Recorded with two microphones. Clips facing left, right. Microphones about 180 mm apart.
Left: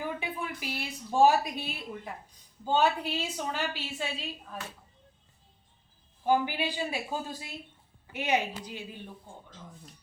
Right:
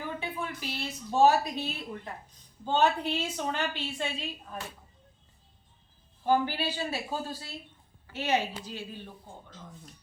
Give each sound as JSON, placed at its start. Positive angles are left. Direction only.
{"t": 0.0, "sound": "a woman's voice", "side_deg": 10}
{"t": 6.2, "sound": "a woman's voice", "side_deg": 10}